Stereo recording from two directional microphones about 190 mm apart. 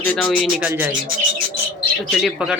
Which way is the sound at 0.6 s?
10° right (ahead or behind).